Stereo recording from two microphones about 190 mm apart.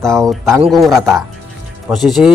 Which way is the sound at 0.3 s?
Centre (ahead or behind).